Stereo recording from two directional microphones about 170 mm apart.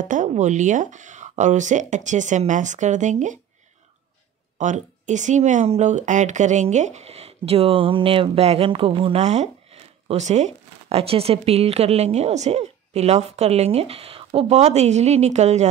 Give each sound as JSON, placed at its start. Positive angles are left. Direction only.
{"t": 0.0, "sound": "speech", "side_deg": -50}
{"t": 4.6, "sound": "speech", "side_deg": -45}